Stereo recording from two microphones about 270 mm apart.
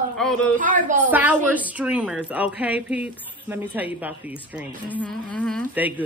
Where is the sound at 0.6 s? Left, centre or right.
Right.